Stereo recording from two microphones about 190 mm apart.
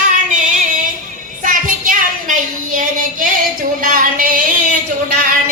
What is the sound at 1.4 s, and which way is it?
Speech, 45° right (ahead or behind).